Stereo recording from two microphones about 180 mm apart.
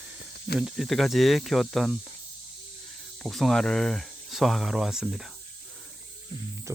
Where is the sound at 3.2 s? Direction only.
Centre (ahead or behind).